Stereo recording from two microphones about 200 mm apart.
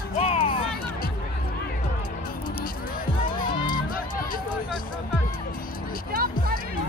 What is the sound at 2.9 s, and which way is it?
Music, 45° left (ahead or behind).